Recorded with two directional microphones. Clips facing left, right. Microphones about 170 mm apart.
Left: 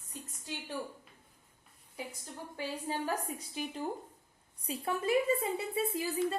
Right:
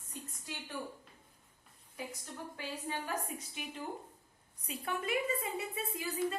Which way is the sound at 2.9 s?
35° left (ahead or behind).